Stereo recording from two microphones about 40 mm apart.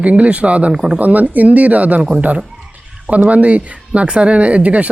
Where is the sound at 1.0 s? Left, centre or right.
Right.